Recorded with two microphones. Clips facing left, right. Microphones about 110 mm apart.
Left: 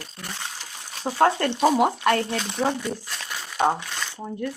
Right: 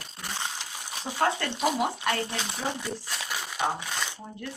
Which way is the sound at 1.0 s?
50° left (ahead or behind).